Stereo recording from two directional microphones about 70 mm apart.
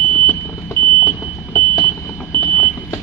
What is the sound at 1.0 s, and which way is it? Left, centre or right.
Vehicle, left.